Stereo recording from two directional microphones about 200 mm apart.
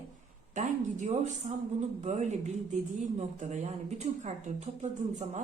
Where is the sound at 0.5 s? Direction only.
35° right (ahead or behind).